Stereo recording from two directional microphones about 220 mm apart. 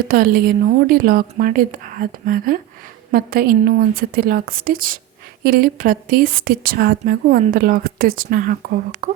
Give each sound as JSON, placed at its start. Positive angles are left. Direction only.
{"t": 0.1, "sound": "a woman's voice", "side_deg": -40}